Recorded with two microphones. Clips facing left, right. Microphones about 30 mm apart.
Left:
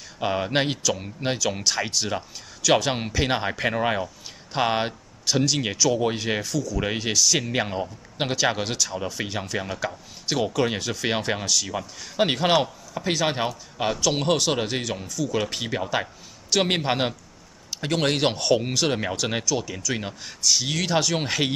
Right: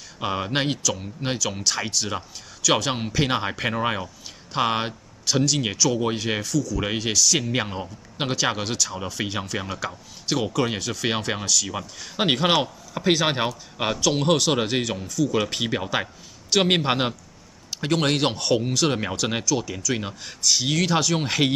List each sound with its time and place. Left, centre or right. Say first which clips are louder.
0.2 s speech: left 1 dB; centre
6.5 s speech: right 1 dB; centre
11.6 s a man's voice: even; centre
13.9 s a man's voice: right 3 dB; centre